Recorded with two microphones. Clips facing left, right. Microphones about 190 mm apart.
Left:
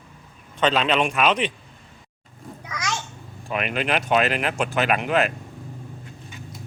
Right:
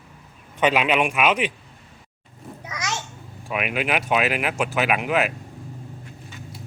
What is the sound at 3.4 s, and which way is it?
Speech, 5° right (ahead or behind).